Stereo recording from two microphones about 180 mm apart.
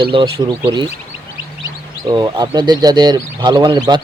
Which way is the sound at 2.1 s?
20° right (ahead or behind).